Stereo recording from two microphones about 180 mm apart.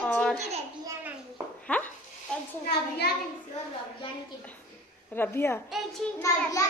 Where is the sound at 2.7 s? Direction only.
65° left (ahead or behind).